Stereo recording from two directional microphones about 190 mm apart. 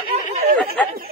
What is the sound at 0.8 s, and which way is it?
Speech, 5° left (ahead or behind).